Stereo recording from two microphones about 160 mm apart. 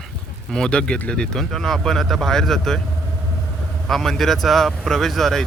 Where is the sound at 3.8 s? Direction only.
Centre (ahead or behind).